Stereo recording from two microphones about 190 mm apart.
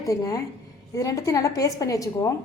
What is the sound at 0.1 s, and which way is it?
A woman's voice, 15° left (ahead or behind).